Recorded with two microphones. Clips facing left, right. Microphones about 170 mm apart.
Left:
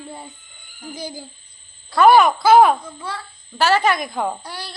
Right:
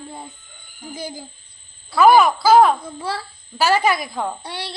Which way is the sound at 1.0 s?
50° right (ahead or behind).